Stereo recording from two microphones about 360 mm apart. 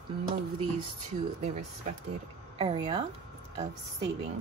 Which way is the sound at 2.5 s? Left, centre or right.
Centre.